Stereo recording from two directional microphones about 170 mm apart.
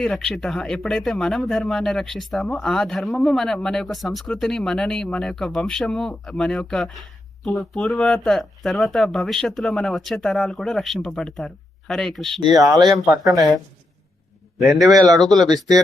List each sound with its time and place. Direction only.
0.0 s speech: 5° left (ahead or behind)
12.5 s speech: 20° right (ahead or behind)
14.6 s speech: centre (ahead or behind)
14.8 s speech: 20° right (ahead or behind)
15.2 s speech: centre (ahead or behind)